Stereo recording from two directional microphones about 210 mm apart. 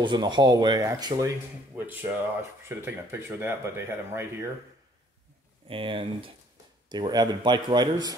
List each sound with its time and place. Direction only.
0.0 s speech: 20° right (ahead or behind)
1.8 s music: 10° right (ahead or behind)
2.8 s speech: 10° right (ahead or behind)
5.7 s speech: 25° right (ahead or behind)